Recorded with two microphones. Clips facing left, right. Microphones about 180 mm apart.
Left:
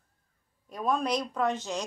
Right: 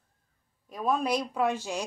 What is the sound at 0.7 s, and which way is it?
Speech, 5° right (ahead or behind).